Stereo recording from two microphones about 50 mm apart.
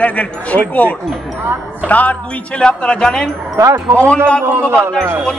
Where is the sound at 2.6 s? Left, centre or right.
Centre.